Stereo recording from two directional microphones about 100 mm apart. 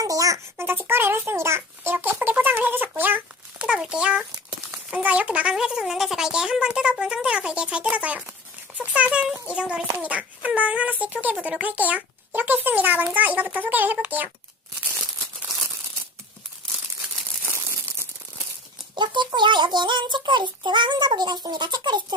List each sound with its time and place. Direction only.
0.0 s a sound: 35° right (ahead or behind)
0.5 s speech: 20° right (ahead or behind)
18.9 s a child's voice: 50° right (ahead or behind)